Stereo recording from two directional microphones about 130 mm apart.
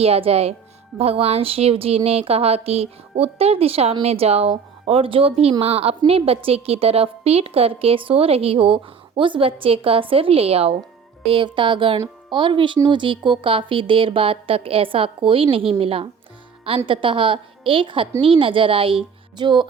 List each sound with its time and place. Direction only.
0.0 s a woman's voice: 50° right (ahead or behind)